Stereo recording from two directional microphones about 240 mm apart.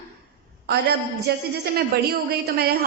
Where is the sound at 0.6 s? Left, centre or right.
Right.